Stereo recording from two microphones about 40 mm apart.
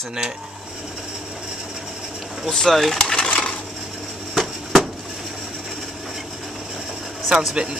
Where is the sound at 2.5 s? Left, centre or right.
Centre.